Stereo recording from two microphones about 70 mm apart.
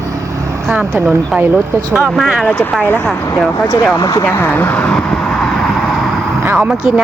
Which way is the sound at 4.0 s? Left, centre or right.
Left.